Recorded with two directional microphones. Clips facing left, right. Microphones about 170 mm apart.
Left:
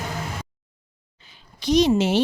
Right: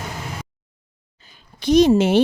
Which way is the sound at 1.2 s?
50° right (ahead or behind).